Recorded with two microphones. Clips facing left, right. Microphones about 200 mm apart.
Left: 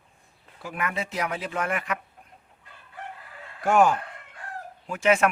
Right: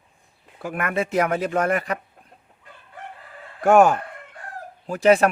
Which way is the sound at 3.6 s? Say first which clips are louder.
Right 5 dB; 50° right (ahead or behind).